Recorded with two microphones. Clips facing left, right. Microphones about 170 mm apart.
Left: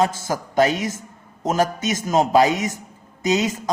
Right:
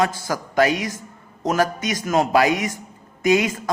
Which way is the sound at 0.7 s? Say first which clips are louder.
Even; 50° left (ahead or behind).